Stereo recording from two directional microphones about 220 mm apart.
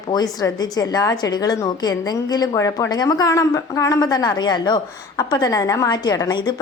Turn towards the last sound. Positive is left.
turn(degrees=20)  # may be behind; listen again after turning